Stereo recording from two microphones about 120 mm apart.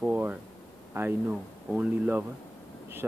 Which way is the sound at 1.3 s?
10° right (ahead or behind).